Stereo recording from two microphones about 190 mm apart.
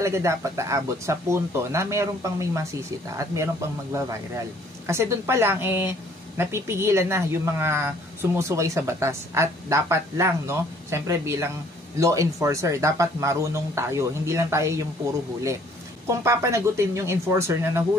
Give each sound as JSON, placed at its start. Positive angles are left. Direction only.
{"t": 0.0, "sound": "speech", "side_deg": -15}
{"t": 3.9, "sound": "speech", "side_deg": -15}
{"t": 16.1, "sound": "speech", "side_deg": -15}